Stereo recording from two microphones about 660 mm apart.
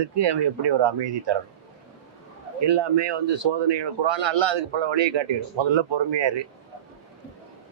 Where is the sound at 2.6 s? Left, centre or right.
Right.